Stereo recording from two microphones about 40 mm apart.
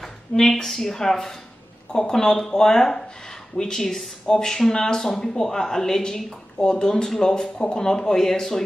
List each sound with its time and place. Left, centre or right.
0.0 s a woman's voice: centre